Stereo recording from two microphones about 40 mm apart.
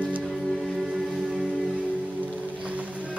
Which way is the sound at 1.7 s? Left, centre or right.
Right.